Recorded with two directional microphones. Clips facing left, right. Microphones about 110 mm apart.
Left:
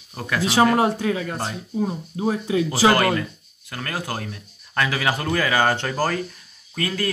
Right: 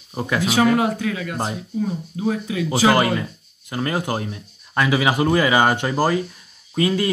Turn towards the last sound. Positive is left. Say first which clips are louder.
# right 6 dB
turn(degrees=-20)  # may be behind; listen again after turning